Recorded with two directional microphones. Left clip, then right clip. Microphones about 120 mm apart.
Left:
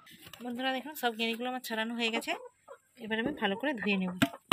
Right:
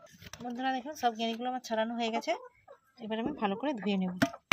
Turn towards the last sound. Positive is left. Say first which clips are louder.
# left 1 dB
turn(degrees=-55)  # may be behind; listen again after turning